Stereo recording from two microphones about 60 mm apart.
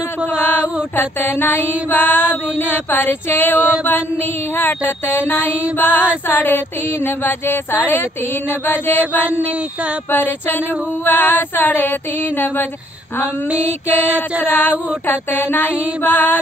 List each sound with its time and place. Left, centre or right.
0.9 s speech: left
1.9 s mantra: left
2.7 s speech: left
3.5 s a sound: right
3.8 s speech: left
9.3 s a sound: right
10.1 s speech: left
13.7 s speech: left
14.0 s a sound: right
14.4 s speech: left